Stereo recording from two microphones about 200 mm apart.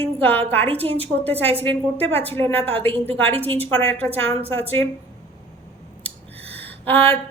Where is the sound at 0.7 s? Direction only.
30° right (ahead or behind).